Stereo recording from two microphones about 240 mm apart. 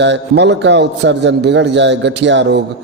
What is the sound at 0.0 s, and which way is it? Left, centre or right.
A man's voice, right.